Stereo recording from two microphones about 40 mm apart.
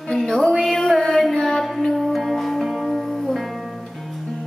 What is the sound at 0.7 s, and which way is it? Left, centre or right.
Music, centre.